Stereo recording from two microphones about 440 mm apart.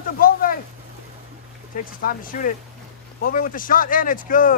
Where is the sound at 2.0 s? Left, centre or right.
Centre.